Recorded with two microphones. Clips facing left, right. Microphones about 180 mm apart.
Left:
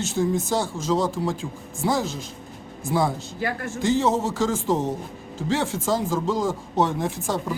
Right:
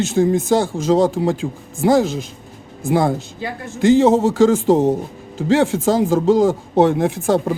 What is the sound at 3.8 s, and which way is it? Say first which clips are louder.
Speech: right 9 dB; 80° right.